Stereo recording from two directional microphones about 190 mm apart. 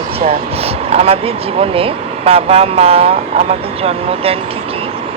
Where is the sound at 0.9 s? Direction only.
30° right (ahead or behind).